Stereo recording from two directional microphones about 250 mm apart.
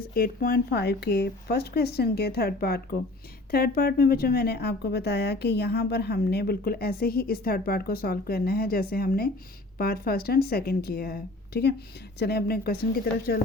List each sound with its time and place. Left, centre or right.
0.1 s a woman's voice: left